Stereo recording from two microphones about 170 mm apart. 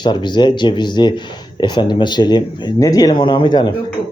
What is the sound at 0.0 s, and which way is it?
Speech, 25° left (ahead or behind).